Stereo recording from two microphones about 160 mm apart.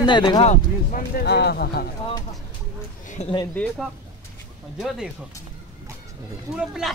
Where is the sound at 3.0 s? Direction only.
50° left (ahead or behind).